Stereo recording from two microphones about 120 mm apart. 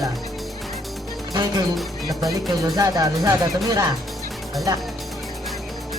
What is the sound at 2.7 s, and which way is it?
Speech, 30° right (ahead or behind).